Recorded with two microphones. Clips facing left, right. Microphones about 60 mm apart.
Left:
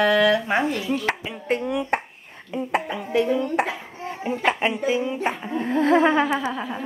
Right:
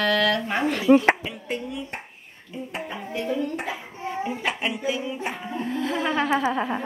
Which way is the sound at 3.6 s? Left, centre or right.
Left.